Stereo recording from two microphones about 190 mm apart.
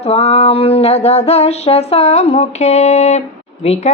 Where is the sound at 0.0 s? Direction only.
35° left (ahead or behind).